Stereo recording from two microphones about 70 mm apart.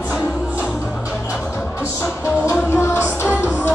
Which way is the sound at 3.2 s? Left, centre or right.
Centre.